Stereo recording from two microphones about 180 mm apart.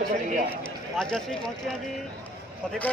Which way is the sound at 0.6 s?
5° left (ahead or behind).